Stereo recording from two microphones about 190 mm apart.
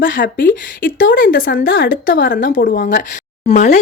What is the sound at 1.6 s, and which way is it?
Speech, 85° left.